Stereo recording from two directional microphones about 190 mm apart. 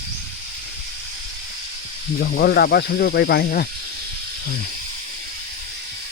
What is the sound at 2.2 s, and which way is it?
Speech, 55° left (ahead or behind).